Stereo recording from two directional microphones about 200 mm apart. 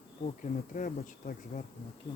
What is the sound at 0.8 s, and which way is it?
Speech, 40° left (ahead or behind).